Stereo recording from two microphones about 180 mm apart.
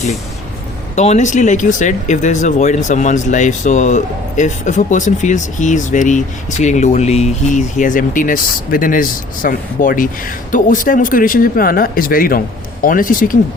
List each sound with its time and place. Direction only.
0.9 s speech: 40° left (ahead or behind)